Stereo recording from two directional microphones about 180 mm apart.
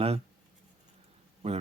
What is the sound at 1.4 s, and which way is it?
Speech, 35° right (ahead or behind).